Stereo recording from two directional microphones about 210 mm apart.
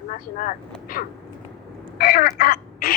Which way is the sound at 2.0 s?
45° left (ahead or behind).